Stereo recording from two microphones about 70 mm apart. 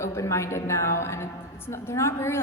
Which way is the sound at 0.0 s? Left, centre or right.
Left.